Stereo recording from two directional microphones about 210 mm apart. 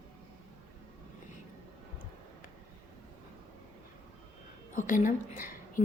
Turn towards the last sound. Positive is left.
turn(degrees=40)  # may be behind; listen again after turning